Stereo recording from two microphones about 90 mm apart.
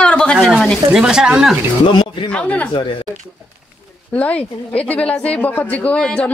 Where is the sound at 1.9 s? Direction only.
65° left (ahead or behind).